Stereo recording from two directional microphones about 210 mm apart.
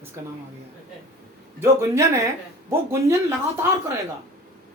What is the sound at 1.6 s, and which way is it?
Speech, 10° right (ahead or behind).